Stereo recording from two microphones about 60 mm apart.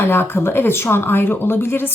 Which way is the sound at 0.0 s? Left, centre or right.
Left.